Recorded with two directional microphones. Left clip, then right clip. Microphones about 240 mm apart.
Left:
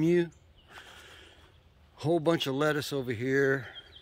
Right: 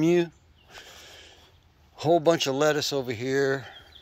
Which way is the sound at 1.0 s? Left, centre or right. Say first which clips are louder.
Right 4 dB; centre.